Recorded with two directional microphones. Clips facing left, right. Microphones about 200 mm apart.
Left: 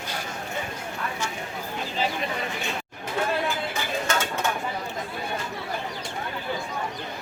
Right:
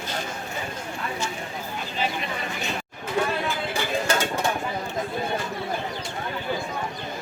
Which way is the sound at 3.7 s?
35° right (ahead or behind).